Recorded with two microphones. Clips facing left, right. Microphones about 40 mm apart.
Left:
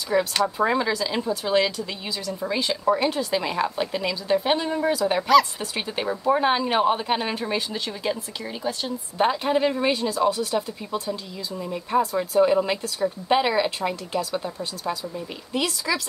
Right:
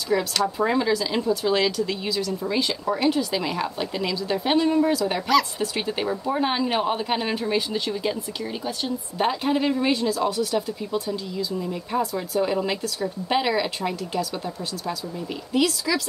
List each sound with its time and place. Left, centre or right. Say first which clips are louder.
0.1 s a woman's voice: left 2 dB; centre
0.7 s a woman's voice: right 1 dB; centre
9.2 s a woman's voice: left 2 dB; centre
10.9 s a woman's voice: right 2 dB; centre